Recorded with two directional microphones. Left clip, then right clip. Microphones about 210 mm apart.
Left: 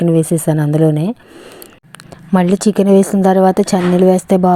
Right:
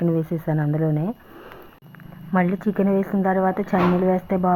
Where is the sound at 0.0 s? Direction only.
35° left (ahead or behind).